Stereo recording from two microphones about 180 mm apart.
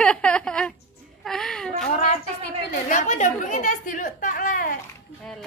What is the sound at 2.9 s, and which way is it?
Speech, 40° left (ahead or behind).